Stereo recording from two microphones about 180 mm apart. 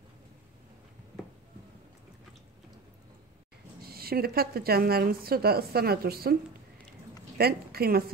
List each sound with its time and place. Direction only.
3.8 s a woman's voice: 55° right (ahead or behind)
7.3 s a woman's voice: 60° right (ahead or behind)